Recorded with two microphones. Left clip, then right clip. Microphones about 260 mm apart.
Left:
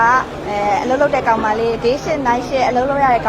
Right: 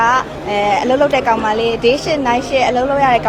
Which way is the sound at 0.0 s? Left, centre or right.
Centre.